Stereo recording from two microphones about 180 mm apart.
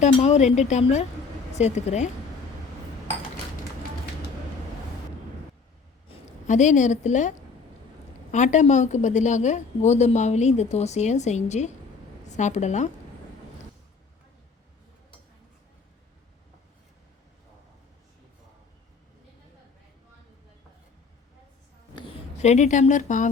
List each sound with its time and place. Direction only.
0.0 s a woman's voice: 40° left (ahead or behind)
6.1 s a woman's voice: 40° left (ahead or behind)
21.9 s speech: 30° left (ahead or behind); by 23.3 s 45° left (ahead or behind)